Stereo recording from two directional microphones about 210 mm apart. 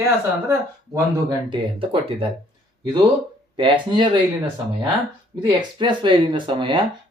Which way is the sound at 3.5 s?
25° right (ahead or behind).